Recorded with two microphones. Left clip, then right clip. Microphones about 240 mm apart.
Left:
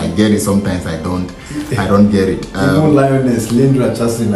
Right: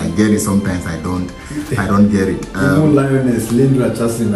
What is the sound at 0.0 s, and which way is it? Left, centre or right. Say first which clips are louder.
Music: left 2 dB; centre.